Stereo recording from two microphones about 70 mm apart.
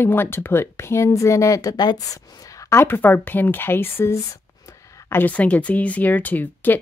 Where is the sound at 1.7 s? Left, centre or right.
Left.